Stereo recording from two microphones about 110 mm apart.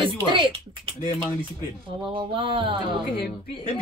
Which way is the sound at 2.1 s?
50° right (ahead or behind).